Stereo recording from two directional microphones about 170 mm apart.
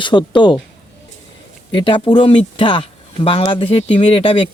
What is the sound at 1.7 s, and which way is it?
Speech, 30° left (ahead or behind).